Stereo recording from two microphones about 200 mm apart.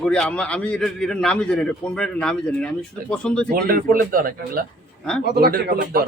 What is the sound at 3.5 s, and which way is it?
Speech, 45° right (ahead or behind).